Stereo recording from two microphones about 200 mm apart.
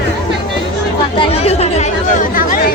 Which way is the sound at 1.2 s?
30° left (ahead or behind).